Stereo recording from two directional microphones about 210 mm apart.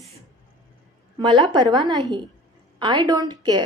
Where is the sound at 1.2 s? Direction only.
20° right (ahead or behind).